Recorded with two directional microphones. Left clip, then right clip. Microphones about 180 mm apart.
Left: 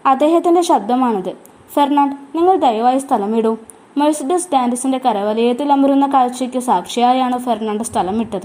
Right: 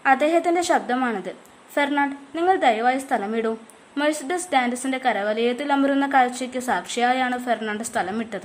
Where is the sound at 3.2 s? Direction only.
20° right (ahead or behind).